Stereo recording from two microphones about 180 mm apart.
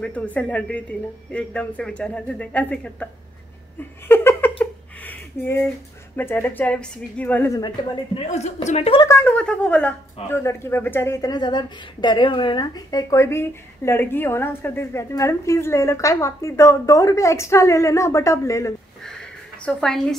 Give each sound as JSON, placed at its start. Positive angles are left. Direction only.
{"t": 0.0, "sound": "speech", "side_deg": 5}
{"t": 4.1, "sound": "a sound", "side_deg": 10}
{"t": 6.1, "sound": "speech", "side_deg": 10}
{"t": 7.5, "sound": "a woman's voice", "side_deg": 25}
{"t": 9.0, "sound": "speech", "side_deg": 15}
{"t": 19.6, "sound": "a woman's voice", "side_deg": 5}